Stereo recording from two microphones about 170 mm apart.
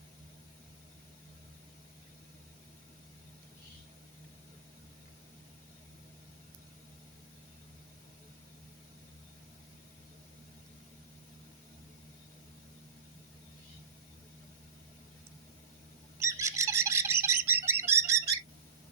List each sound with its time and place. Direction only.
16.1 s bird: 15° right (ahead or behind)